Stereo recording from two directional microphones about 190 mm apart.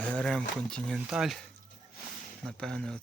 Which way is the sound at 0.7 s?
5° left (ahead or behind).